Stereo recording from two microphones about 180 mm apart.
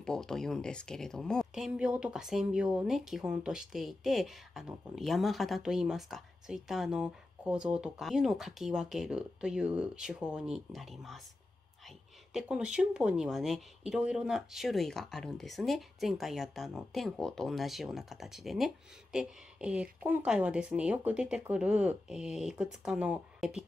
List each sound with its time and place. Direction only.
0.0 s speech: 5° left (ahead or behind)
12.3 s speech: 5° right (ahead or behind)